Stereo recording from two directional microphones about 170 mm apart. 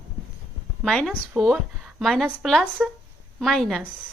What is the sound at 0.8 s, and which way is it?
A woman's voice, centre (ahead or behind).